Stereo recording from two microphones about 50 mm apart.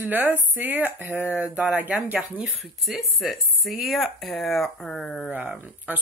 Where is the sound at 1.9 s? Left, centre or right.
Right.